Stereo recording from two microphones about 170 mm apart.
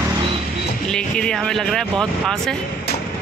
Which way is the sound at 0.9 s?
5° left (ahead or behind).